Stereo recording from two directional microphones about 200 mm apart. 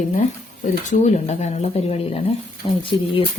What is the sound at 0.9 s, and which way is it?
Speech, 35° left (ahead or behind).